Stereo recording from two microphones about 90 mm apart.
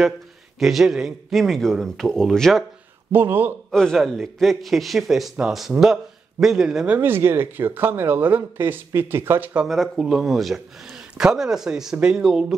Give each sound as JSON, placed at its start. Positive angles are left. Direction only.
{"t": 0.6, "sound": "speech", "side_deg": -5}
{"t": 3.1, "sound": "speech", "side_deg": -20}
{"t": 3.7, "sound": "a man's voice", "side_deg": 5}
{"t": 7.0, "sound": "speech", "side_deg": -25}
{"t": 9.7, "sound": "speech", "side_deg": 0}